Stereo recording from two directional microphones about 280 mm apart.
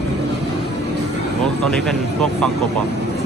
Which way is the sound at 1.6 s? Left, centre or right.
Centre.